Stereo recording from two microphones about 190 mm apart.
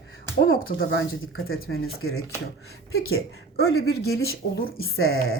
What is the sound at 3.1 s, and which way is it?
Speech, 75° left (ahead or behind).